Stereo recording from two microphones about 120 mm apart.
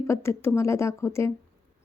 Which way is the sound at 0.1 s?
20° left (ahead or behind).